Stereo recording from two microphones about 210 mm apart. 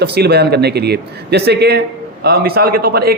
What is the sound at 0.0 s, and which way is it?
A man's voice, 50° right (ahead or behind).